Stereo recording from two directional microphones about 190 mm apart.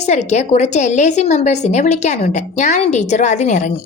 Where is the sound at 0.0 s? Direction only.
35° left (ahead or behind).